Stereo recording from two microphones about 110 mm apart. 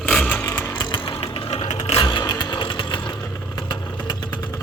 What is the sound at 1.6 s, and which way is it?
Vehicle, 90° left.